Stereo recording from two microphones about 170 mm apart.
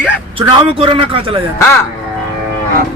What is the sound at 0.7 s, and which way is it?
Speech, 30° right (ahead or behind).